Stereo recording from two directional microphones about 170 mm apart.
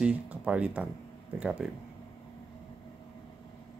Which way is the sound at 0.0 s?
5° right (ahead or behind).